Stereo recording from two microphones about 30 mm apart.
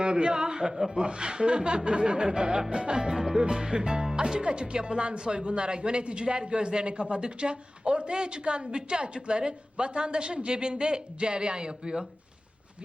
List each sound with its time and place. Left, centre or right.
0.0 s a man's voice: right